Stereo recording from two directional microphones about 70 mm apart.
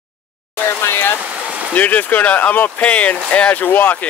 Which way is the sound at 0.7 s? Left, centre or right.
Left.